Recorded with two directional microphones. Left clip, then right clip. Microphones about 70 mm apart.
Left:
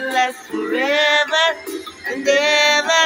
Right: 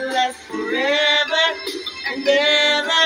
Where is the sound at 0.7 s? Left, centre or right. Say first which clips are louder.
Left 1 dB; centre.